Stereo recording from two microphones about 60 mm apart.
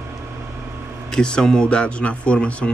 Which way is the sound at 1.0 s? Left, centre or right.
Centre.